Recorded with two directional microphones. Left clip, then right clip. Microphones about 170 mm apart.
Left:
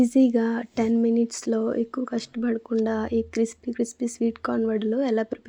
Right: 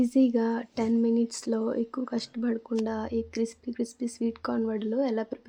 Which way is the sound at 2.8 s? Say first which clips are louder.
Left 6 dB; 25° left (ahead or behind).